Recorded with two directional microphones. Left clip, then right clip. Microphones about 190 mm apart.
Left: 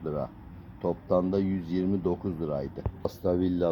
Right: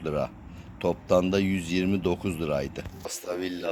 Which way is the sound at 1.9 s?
30° right (ahead or behind).